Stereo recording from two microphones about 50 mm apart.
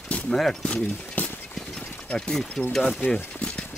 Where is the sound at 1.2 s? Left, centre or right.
Left.